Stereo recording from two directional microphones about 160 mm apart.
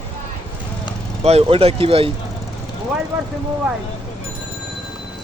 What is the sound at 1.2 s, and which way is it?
Speech, 40° right (ahead or behind).